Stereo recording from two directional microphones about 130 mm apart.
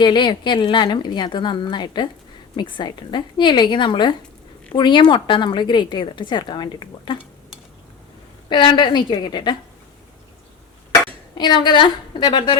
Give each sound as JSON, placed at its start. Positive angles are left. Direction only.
{"t": 0.0, "sound": "a woman's voice", "side_deg": 35}
{"t": 8.4, "sound": "a woman's voice", "side_deg": 35}
{"t": 11.3, "sound": "a woman's voice", "side_deg": 35}